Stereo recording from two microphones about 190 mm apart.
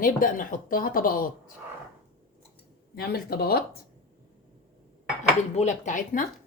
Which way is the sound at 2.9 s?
55° left (ahead or behind).